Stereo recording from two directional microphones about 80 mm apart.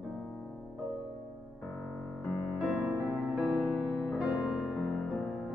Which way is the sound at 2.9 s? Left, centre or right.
Right.